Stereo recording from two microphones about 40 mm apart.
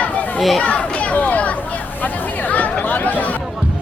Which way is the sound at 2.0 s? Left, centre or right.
Left.